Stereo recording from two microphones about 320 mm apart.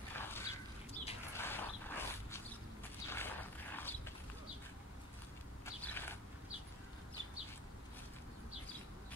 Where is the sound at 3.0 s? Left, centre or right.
Centre.